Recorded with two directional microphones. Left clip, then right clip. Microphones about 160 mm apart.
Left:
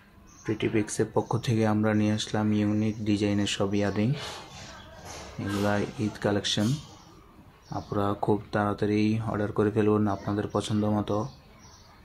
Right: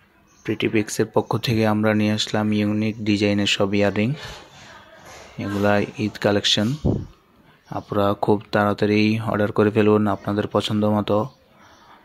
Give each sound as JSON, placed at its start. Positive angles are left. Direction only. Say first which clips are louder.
{"t": 0.4, "sound": "speech", "louder": "right 6 dB", "side_deg": -50}
{"t": 5.4, "sound": "speech", "louder": "right 8 dB", "side_deg": -50}
{"t": 7.7, "sound": "speech", "louder": "right 8 dB", "side_deg": -45}